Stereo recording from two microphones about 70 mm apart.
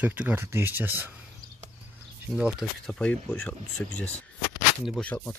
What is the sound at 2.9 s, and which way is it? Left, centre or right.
Speech, centre.